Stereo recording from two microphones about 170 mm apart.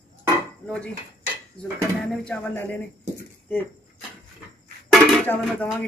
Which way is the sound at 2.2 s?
10° left (ahead or behind).